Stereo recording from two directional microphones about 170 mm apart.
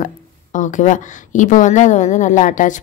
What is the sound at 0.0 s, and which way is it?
A woman's voice, 50° left (ahead or behind).